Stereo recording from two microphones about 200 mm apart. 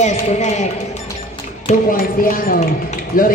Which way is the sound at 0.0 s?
35° left (ahead or behind).